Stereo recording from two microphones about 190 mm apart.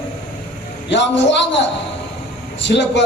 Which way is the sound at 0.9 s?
70° left (ahead or behind).